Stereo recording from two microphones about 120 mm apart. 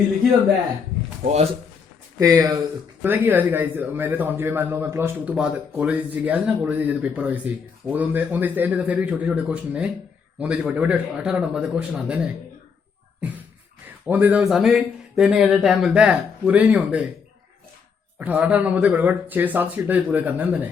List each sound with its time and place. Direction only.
2.1 s a man's voice: 25° right (ahead or behind); by 12.3 s 5° right (ahead or behind)
14.1 s a man's voice: 15° right (ahead or behind)
14.4 s speech: 5° right (ahead or behind)
18.2 s a man's voice: 10° right (ahead or behind)